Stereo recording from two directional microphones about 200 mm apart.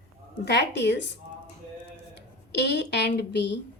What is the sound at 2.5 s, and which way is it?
A woman's voice, 60° left (ahead or behind).